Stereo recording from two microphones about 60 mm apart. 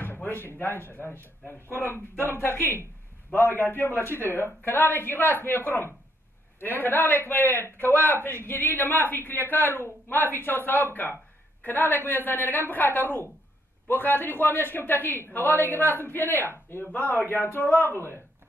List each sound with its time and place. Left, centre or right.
0.0 s a sound: left
0.6 s a woman's voice: left
6.6 s a woman's voice: left